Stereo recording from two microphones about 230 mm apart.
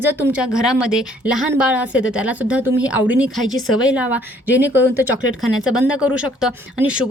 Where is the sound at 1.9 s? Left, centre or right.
Left.